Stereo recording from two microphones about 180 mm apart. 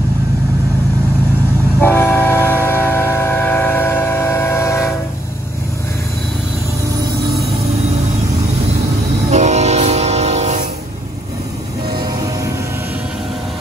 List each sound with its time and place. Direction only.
1.8 s train: 10° left (ahead or behind)
9.3 s train: 40° right (ahead or behind)